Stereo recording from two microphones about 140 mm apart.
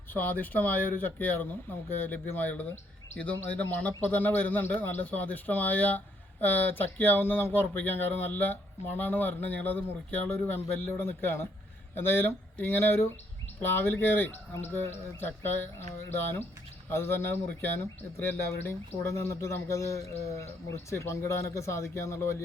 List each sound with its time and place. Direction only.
0.1 s a man's voice: 15° left (ahead or behind)